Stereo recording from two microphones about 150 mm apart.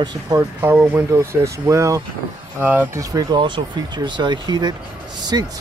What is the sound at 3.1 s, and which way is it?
Speech, 30° right (ahead or behind).